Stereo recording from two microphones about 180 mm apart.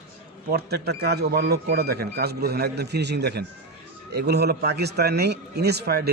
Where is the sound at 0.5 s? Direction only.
65° right (ahead or behind).